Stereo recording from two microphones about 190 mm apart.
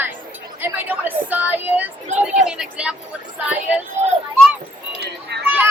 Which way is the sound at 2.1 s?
40° right (ahead or behind).